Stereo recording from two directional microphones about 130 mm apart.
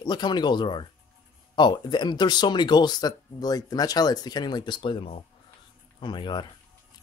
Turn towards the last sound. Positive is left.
turn(degrees=40)  # may be behind; listen again after turning